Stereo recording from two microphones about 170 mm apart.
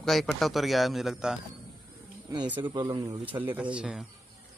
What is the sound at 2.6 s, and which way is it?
Speech, 25° right (ahead or behind).